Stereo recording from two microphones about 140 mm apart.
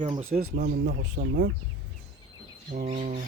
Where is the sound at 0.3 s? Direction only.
85° right.